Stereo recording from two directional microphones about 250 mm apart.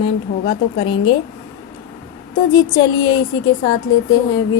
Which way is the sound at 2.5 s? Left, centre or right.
Centre.